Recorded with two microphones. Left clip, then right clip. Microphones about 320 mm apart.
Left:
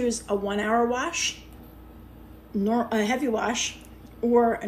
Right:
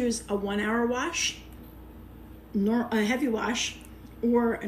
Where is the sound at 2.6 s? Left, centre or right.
Left.